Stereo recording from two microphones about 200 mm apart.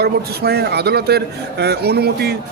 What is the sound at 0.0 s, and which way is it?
Speech, 55° right (ahead or behind).